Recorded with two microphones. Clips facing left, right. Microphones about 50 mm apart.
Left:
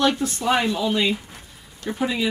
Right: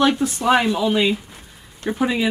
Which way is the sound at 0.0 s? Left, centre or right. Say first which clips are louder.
Right 3 dB; centre.